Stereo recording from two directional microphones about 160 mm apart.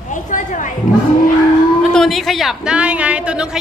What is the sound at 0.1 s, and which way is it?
Speech, 55° left (ahead or behind).